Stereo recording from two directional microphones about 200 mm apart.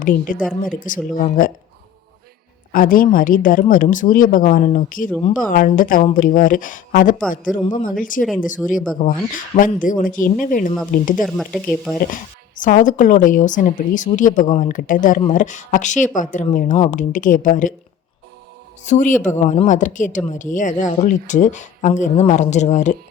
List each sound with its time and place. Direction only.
0.0 s speech: 40° left (ahead or behind)
2.7 s speech: 45° left (ahead or behind)
11.2 s speech: centre (ahead or behind)
12.1 s speech: 40° left (ahead or behind)
18.9 s speech: 40° left (ahead or behind)